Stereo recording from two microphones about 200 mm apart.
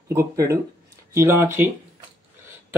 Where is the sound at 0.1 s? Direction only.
15° right (ahead or behind).